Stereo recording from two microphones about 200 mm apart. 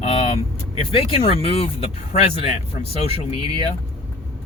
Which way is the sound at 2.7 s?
30° left (ahead or behind).